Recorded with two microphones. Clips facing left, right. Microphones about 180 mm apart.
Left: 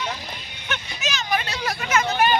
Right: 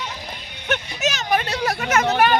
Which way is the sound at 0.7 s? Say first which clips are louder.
Right 6 dB; 45° right (ahead or behind).